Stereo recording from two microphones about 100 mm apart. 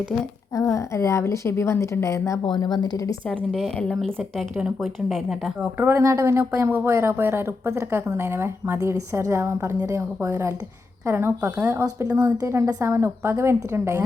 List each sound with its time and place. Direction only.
0.5 s a woman's voice: 35° left (ahead or behind)
2.4 s speech: 50° left (ahead or behind)
3.2 s a woman's voice: 5° left (ahead or behind)
5.7 s a woman's voice: 25° right (ahead or behind)
12.0 s a woman's voice: 40° right (ahead or behind)